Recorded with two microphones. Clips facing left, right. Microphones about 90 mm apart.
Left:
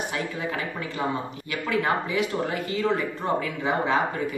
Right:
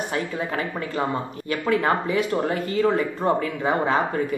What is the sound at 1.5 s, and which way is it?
Speech, 40° right (ahead or behind).